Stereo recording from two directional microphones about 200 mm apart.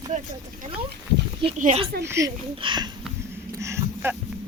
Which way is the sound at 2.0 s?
15° right (ahead or behind).